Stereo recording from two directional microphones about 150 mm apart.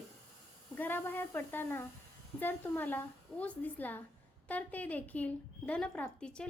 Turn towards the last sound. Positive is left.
turn(degrees=5)  # may be behind; listen again after turning